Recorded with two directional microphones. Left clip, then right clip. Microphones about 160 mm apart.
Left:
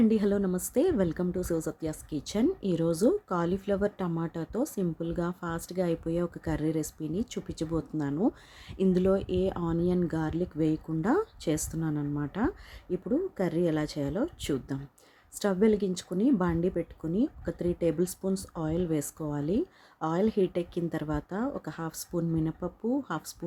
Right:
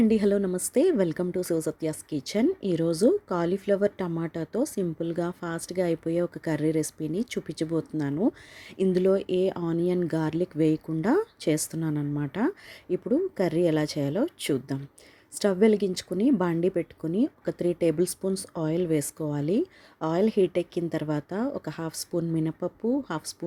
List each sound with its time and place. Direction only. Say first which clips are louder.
0.0 s a woman's voice: right 3 dB; 10° right (ahead or behind)